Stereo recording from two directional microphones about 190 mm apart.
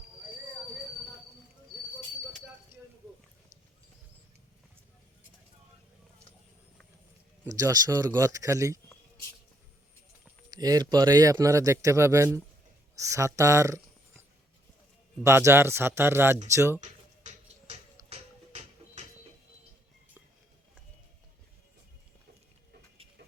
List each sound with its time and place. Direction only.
2.7 s a sound: 10° right (ahead or behind)
7.4 s speech: 20° right (ahead or behind)
10.5 s speech: 20° right (ahead or behind)
15.2 s speech: 15° right (ahead or behind)
16.8 s music: 35° right (ahead or behind)